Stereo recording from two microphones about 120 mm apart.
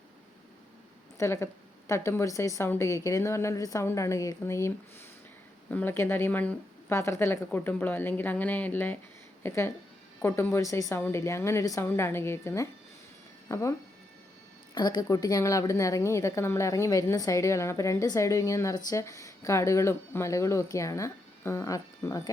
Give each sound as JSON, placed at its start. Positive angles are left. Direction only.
{"t": 1.2, "sound": "a woman's voice", "side_deg": 25}
{"t": 5.7, "sound": "a woman's voice", "side_deg": 20}
{"t": 14.8, "sound": "a woman's voice", "side_deg": 35}